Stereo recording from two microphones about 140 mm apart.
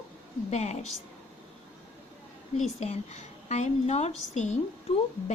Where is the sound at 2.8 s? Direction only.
50° left (ahead or behind).